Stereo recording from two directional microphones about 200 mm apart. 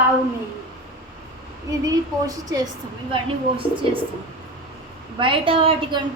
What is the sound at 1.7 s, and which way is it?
Speech, 15° right (ahead or behind).